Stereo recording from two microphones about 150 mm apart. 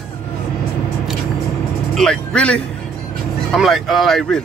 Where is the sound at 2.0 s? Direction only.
5° left (ahead or behind).